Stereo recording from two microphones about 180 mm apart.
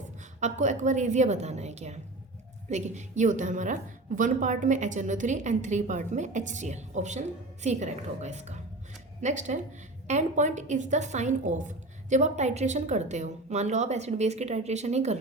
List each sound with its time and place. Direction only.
0.3 s a woman's voice: 40° right (ahead or behind)